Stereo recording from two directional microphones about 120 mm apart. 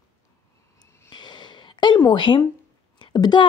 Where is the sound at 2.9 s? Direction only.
40° left (ahead or behind).